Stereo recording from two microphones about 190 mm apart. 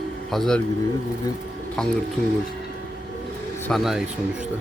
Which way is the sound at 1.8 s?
5° left (ahead or behind).